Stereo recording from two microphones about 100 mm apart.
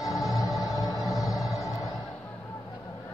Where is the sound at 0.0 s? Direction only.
35° left (ahead or behind).